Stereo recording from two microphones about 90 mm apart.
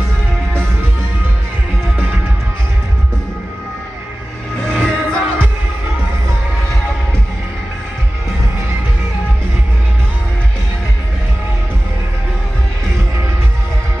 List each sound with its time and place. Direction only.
4.6 s music: 5° left (ahead or behind)